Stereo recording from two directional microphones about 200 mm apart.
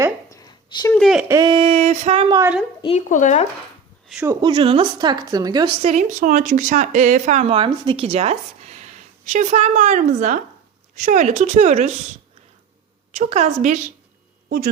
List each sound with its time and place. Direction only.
0.3 s a sound: 15° left (ahead or behind)
0.9 s speech: centre (ahead or behind)
1.3 s a woman's voice: 20° right (ahead or behind)
2.8 s speech: 35° left (ahead or behind)
4.1 s speech: 10° right (ahead or behind)
4.4 s a woman's voice: 25° right (ahead or behind)
5.8 s a woman's voice: 35° right (ahead or behind)
13.1 s speech: 35° right (ahead or behind)